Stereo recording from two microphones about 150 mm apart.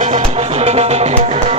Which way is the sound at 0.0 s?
50° right (ahead or behind).